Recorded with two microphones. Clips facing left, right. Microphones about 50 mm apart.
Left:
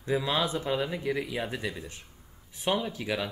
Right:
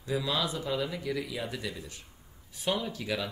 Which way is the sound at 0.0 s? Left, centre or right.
Left.